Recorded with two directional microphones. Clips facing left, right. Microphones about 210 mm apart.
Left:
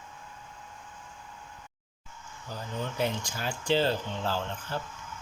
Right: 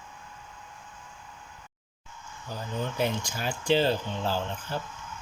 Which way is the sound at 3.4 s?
15° right (ahead or behind).